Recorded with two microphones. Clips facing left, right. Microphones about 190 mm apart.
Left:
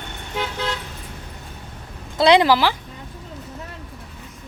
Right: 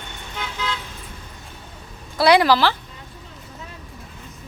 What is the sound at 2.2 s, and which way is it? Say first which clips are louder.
Speech: left 1 dB; 20° left (ahead or behind).